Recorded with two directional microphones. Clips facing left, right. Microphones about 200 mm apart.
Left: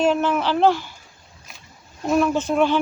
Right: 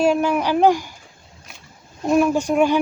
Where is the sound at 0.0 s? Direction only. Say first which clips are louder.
Right 2 dB; 10° right (ahead or behind).